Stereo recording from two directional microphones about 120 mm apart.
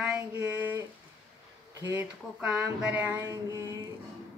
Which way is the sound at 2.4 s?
10° right (ahead or behind).